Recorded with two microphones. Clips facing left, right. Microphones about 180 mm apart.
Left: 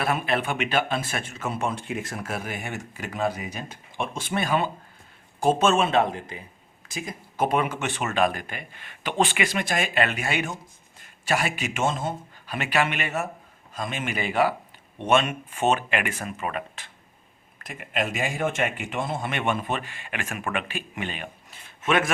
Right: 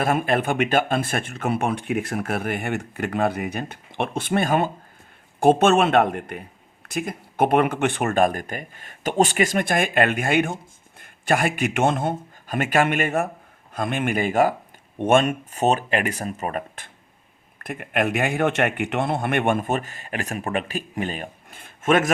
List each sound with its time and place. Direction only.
0.0 s speech: 45° right (ahead or behind)
17.6 s speech: 55° right (ahead or behind)